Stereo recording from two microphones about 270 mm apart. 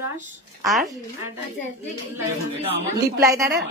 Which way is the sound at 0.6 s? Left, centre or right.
Centre.